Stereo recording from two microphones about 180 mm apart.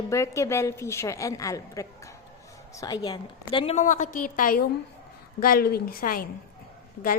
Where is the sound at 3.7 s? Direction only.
45° left (ahead or behind).